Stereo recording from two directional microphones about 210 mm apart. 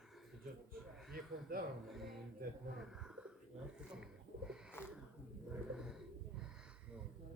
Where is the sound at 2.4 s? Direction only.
45° right (ahead or behind).